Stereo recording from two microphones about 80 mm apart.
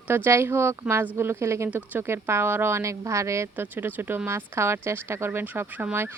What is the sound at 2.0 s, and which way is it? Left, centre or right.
Speech, right.